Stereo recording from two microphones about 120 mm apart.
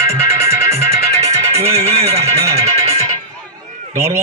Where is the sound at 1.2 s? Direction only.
60° right (ahead or behind).